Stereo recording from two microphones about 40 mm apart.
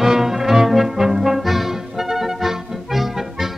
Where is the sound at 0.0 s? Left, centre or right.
Centre.